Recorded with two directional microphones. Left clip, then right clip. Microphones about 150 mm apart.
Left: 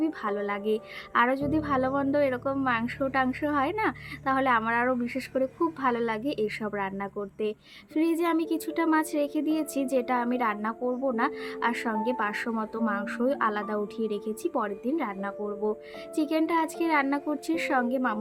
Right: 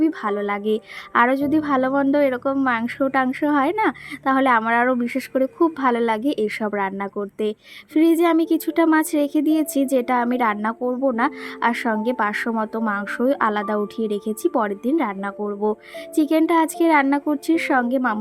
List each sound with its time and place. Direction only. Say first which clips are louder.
0.0 s a woman's voice: right 8 dB; 35° right (ahead or behind)